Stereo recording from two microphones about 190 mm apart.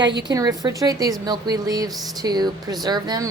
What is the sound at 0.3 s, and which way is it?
A woman's voice, 20° right (ahead or behind).